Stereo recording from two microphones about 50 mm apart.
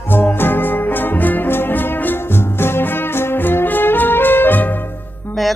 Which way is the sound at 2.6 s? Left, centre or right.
Left.